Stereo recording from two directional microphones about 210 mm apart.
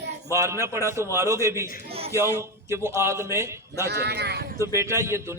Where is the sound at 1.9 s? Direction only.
30° right (ahead or behind).